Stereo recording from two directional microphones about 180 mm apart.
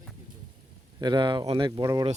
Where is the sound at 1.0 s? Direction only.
25° right (ahead or behind).